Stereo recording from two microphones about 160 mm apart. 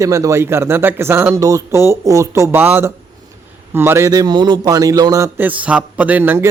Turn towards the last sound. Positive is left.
turn(degrees=-15)  # may be behind; listen again after turning